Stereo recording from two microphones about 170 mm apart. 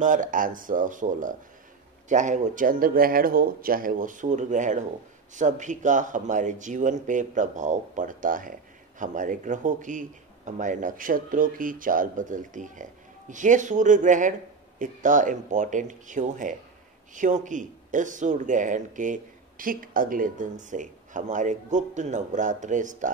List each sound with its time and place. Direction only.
0.0 s speech: 50° right (ahead or behind)